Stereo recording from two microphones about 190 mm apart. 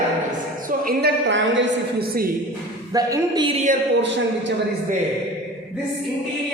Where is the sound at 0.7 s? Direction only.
50° right (ahead or behind).